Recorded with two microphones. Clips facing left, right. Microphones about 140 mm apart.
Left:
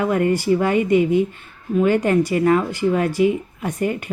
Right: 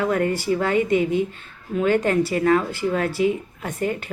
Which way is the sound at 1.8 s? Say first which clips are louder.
Left 2 dB; 10° left (ahead or behind).